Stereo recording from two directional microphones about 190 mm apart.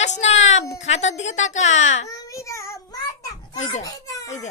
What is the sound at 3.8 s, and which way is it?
Crying, 20° left (ahead or behind).